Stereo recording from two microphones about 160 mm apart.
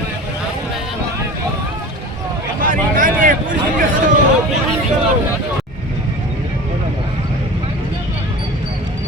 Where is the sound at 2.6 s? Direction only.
60° right (ahead or behind).